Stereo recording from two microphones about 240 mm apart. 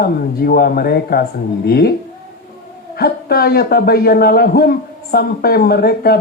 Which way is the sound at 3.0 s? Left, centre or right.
Left.